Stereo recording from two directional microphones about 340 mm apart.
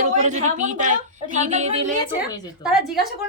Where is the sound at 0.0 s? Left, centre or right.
Right.